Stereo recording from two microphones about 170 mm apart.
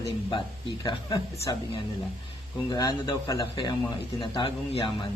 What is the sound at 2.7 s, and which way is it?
Speech, 20° left (ahead or behind).